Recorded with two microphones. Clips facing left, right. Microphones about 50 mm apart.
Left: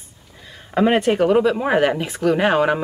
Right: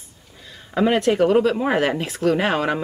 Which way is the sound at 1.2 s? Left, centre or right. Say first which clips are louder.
Left 1 dB; centre.